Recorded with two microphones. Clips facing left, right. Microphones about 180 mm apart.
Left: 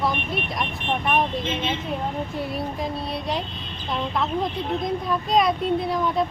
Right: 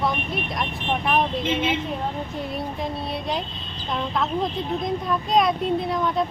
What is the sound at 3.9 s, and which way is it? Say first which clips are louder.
A woman's voice: even; centre (ahead or behind).